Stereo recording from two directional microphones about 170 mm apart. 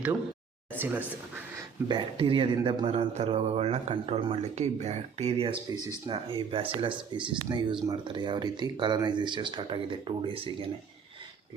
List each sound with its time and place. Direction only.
0.8 s speech: 10° right (ahead or behind)
1.9 s speech: 30° right (ahead or behind)